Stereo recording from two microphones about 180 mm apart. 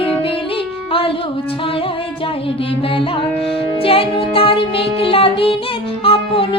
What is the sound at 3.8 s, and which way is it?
Music, 30° left (ahead or behind).